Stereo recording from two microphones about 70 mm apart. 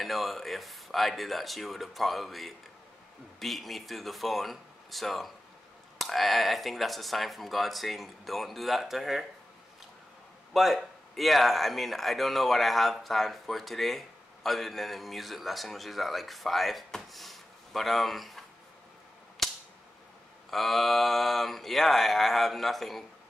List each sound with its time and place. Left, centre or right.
0.0 s speech: centre
10.5 s speech: centre
20.4 s speech: centre